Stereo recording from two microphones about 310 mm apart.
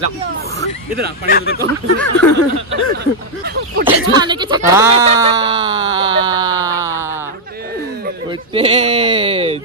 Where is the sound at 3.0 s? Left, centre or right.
Right.